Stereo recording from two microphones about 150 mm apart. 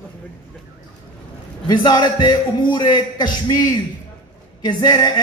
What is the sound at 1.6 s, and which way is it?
A man's voice, 30° left (ahead or behind).